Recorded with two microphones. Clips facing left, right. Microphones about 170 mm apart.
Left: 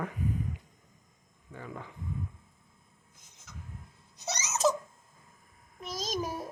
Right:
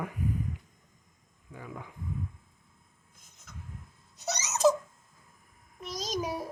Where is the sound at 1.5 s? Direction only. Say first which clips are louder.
Left 1 dB; 10° right (ahead or behind).